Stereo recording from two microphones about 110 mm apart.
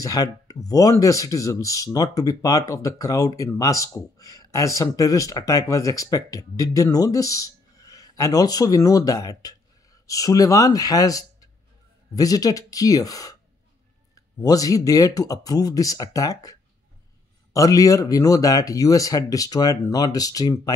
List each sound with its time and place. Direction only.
0.0 s speech: 30° left (ahead or behind)